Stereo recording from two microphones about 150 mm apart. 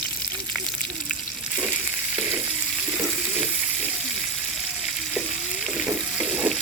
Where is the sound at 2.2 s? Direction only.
10° right (ahead or behind).